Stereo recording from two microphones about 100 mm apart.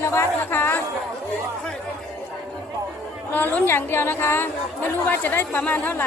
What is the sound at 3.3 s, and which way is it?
Speech, 20° left (ahead or behind).